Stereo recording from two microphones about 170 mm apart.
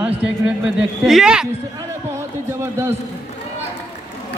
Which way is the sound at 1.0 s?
5° right (ahead or behind).